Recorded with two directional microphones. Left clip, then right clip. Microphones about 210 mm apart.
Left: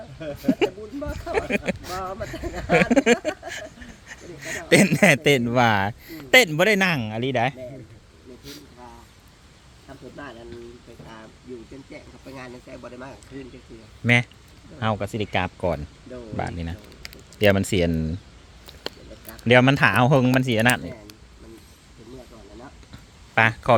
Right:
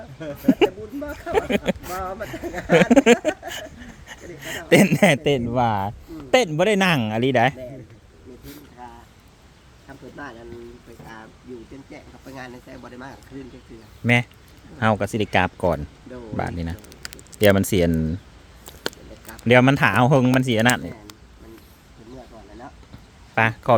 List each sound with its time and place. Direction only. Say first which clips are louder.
0.2 s speech: right 4 dB; 20° right (ahead or behind)
5.2 s a man's voice: left 2 dB; 10° left (ahead or behind)
6.7 s speech: right 3 dB; 20° right (ahead or behind)
8.4 s a sound: right 2 dB; 10° right (ahead or behind)
10.2 s a sound: right 2 dB; 10° right (ahead or behind)
12.3 s speech: right 1 dB; 20° right (ahead or behind)
14.0 s speech: even; 5° right (ahead or behind)
14.8 s speech: right 5 dB; 25° right (ahead or behind)
17.0 s a sound: right 3 dB; 55° right (ahead or behind)
17.4 s speech: right 2 dB; 15° right (ahead or behind)
18.6 s a sound: right 4 dB; 50° right (ahead or behind)
19.3 s speech: right 1 dB; 10° right (ahead or behind)
23.3 s speech: left 1 dB; centre (ahead or behind)